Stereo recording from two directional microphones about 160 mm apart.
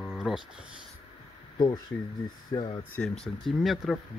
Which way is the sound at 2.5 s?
30° left (ahead or behind).